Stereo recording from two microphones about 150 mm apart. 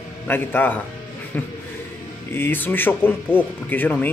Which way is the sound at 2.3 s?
15° left (ahead or behind).